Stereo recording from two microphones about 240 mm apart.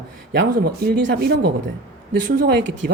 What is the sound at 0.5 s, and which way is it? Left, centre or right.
Speech, right.